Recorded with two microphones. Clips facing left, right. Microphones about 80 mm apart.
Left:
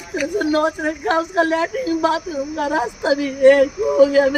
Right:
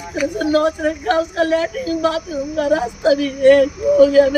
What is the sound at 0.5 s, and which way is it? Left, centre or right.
Speech, left.